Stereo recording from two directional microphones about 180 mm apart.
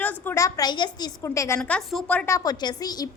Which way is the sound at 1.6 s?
5° left (ahead or behind).